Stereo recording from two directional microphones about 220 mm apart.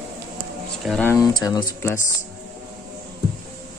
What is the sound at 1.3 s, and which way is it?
Speech, 15° left (ahead or behind).